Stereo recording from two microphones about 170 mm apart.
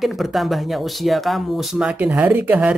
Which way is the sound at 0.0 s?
Centre (ahead or behind).